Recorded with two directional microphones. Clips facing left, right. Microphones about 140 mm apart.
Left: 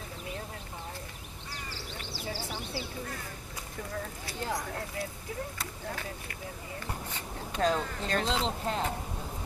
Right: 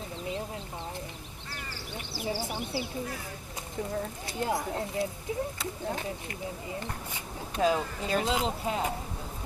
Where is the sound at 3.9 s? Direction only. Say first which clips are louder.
Right 4 dB; 20° right (ahead or behind).